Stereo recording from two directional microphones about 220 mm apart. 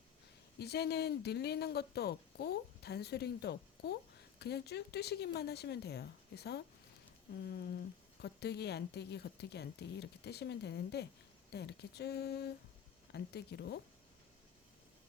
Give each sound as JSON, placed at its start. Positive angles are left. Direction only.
{"t": 0.6, "sound": "a woman's voice", "side_deg": 45}